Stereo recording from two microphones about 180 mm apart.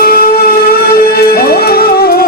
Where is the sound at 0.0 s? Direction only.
55° left (ahead or behind).